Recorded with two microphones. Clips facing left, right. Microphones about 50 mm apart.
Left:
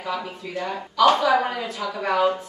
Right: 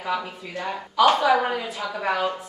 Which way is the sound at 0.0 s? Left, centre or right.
Centre.